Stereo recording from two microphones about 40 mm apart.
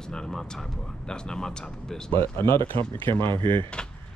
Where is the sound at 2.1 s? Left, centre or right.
Left.